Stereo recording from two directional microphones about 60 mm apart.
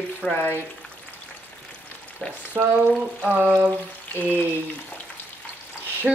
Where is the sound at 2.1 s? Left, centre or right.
Right.